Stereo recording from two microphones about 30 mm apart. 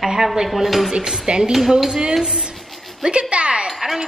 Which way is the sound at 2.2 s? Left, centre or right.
Centre.